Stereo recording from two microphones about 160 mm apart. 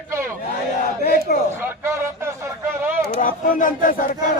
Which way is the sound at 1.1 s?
65° left (ahead or behind).